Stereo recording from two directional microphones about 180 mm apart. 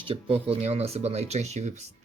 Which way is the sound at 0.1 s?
35° right (ahead or behind).